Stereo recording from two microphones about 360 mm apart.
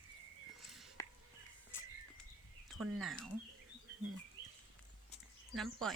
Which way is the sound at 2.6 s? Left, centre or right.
Centre.